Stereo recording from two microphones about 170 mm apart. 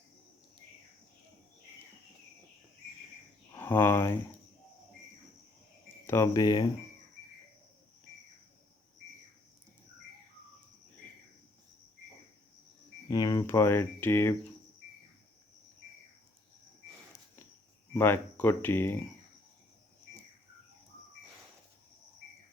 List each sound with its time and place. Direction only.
3.5 s speech: 15° left (ahead or behind)
6.1 s speech: 15° left (ahead or behind)
13.1 s speech: 25° left (ahead or behind)
17.9 s speech: 10° left (ahead or behind)